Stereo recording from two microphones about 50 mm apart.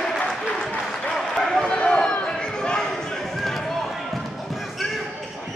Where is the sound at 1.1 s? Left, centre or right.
Centre.